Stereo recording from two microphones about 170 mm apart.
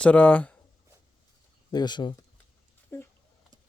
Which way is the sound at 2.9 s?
10° left (ahead or behind).